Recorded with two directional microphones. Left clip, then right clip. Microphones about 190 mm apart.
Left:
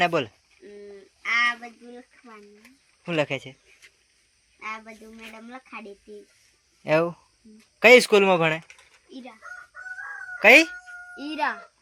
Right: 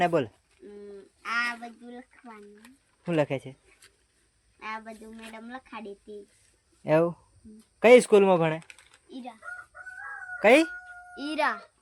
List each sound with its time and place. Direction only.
0.0 s speech: 15° right (ahead or behind)
1.6 s speech: 15° right (ahead or behind)
4.6 s a woman's voice: 5° right (ahead or behind)
6.8 s speech: 20° right (ahead or behind)
10.4 s speech: 15° right (ahead or behind)